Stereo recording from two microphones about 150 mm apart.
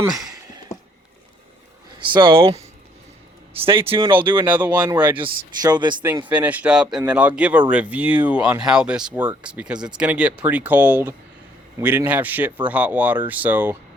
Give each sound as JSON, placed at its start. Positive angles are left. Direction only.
{"t": 2.0, "sound": "speech", "side_deg": -35}
{"t": 3.7, "sound": "speech", "side_deg": -35}
{"t": 4.5, "sound": "speech", "side_deg": -10}
{"t": 4.9, "sound": "speech", "side_deg": -30}
{"t": 6.2, "sound": "speech", "side_deg": -10}